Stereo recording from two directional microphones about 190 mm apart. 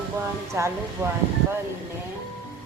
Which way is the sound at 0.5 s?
15° right (ahead or behind).